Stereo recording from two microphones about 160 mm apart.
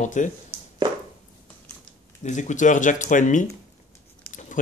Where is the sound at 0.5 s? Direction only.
15° right (ahead or behind).